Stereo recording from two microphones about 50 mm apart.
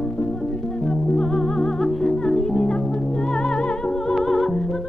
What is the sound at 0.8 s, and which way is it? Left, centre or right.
Music, left.